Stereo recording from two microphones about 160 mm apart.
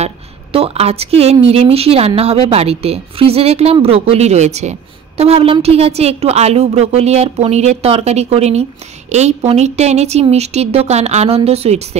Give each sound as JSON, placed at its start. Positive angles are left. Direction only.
{"t": 0.0, "sound": "a woman's voice", "side_deg": -35}